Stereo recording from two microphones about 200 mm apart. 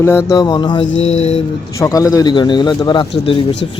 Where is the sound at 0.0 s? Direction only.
10° left (ahead or behind); by 1.4 s 30° left (ahead or behind).